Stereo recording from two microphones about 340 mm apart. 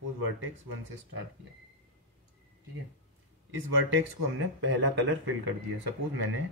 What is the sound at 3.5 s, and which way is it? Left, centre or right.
Speech, right.